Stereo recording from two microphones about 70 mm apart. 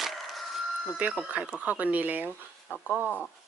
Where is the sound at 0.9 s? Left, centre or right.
Right.